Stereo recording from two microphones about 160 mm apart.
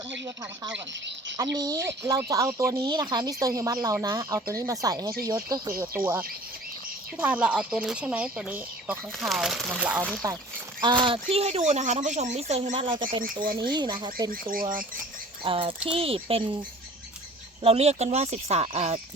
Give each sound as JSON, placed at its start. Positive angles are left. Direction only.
{"t": 1.5, "sound": "speech", "side_deg": -25}
{"t": 10.2, "sound": "speech", "side_deg": -20}
{"t": 13.2, "sound": "speech", "side_deg": -60}
{"t": 13.7, "sound": "speech", "side_deg": -25}
{"t": 14.3, "sound": "speech", "side_deg": -60}
{"t": 15.4, "sound": "speech", "side_deg": -35}
{"t": 17.6, "sound": "speech", "side_deg": -40}